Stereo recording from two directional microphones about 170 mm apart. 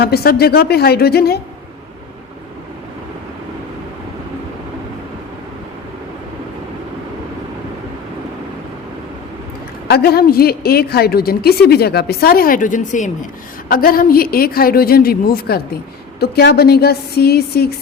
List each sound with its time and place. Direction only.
0.0 s a woman's voice: 65° left (ahead or behind)
9.9 s a woman's voice: 65° left (ahead or behind); by 13.1 s 50° left (ahead or behind)
13.7 s a woman's voice: 60° left (ahead or behind)